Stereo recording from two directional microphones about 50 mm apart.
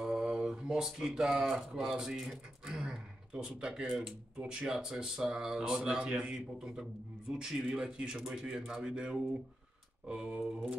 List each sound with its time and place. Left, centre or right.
0.0 s speech: centre
2.6 s a sound: centre
4.4 s speech: right
4.7 s a man's voice: centre
6.3 s a man's voice: centre
10.4 s a man's voice: centre